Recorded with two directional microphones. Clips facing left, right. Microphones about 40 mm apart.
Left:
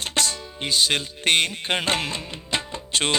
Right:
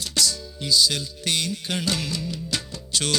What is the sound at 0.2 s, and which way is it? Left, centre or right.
Music, left.